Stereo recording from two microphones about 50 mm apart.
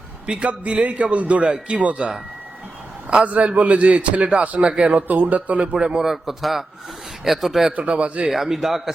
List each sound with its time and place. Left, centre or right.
0.3 s a man's voice: right
3.2 s a man's voice: right
5.0 s speech: right
5.7 s a man's voice: centre
7.8 s a man's voice: right
8.3 s a man's voice: centre